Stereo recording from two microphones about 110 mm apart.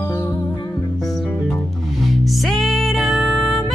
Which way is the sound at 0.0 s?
20° left (ahead or behind).